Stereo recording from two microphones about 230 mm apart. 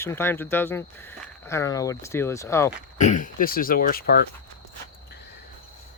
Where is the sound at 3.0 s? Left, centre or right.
Left.